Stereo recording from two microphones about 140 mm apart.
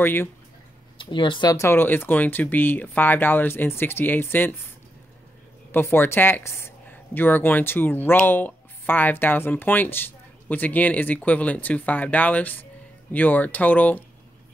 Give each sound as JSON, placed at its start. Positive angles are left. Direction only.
{"t": 0.0, "sound": "a woman's voice", "side_deg": 15}
{"t": 0.9, "sound": "a woman's voice", "side_deg": 35}
{"t": 5.7, "sound": "a woman's voice", "side_deg": 15}